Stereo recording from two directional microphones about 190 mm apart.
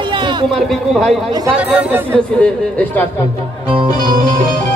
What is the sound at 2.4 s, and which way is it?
Speech, 10° left (ahead or behind).